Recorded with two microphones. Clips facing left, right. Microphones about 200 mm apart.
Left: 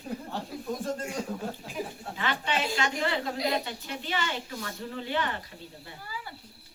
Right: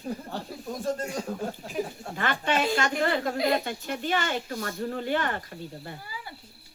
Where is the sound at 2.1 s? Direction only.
50° right (ahead or behind).